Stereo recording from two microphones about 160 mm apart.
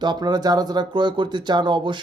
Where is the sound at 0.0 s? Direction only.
25° right (ahead or behind).